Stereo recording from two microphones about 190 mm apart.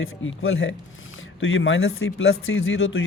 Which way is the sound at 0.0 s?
90° left.